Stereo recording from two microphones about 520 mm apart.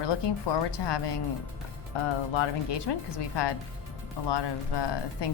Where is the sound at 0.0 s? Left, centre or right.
Left.